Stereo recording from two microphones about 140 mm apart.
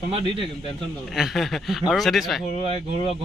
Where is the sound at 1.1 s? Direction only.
Centre (ahead or behind).